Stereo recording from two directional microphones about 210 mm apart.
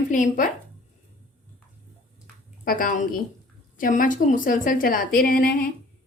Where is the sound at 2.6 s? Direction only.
40° left (ahead or behind).